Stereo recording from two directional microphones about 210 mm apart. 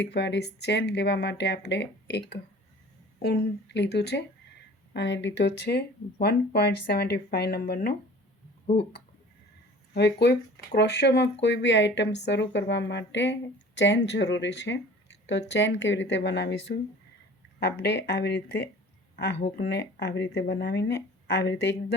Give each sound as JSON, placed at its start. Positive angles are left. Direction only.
{"t": 0.0, "sound": "speech", "side_deg": 55}
{"t": 9.9, "sound": "speech", "side_deg": 55}